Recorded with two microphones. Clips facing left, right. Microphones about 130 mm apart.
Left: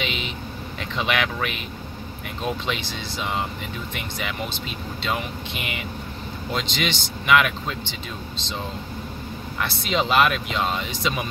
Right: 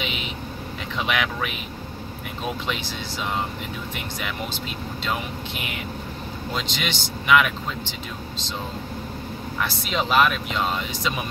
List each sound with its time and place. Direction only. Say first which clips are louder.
0.0 s a sound: left 2 dB; 5° right (ahead or behind)
0.9 s speech: left 1 dB; 5° right (ahead or behind)
3.9 s speech: even; centre (ahead or behind)
9.6 s speech: left 2 dB; centre (ahead or behind)